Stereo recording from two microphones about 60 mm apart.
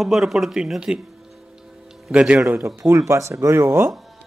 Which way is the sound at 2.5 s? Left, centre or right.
Right.